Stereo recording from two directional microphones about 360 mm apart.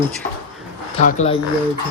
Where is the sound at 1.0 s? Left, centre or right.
Centre.